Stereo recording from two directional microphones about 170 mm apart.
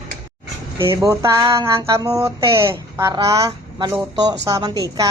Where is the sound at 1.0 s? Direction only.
20° right (ahead or behind).